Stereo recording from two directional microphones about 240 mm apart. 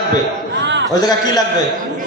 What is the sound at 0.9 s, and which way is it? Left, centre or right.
Speech, centre.